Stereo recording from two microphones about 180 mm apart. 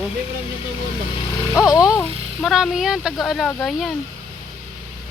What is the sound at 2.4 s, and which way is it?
Speech, centre (ahead or behind).